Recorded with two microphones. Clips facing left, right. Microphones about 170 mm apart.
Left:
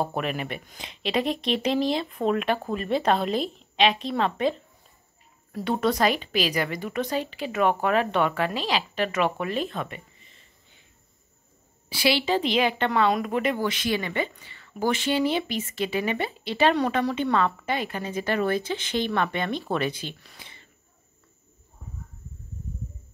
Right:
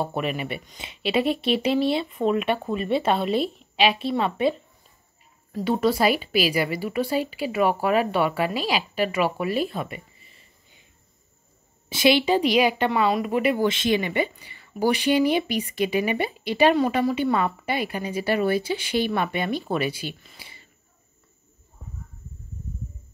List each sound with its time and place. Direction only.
0.0 s a woman's voice: centre (ahead or behind)
11.9 s a woman's voice: 20° right (ahead or behind)
13.7 s a woman's voice: 25° right (ahead or behind)
16.7 s a woman's voice: centre (ahead or behind)